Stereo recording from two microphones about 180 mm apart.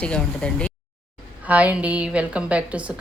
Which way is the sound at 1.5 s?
10° right (ahead or behind).